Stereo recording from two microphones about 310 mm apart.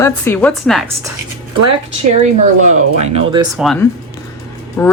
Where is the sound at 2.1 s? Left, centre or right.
Right.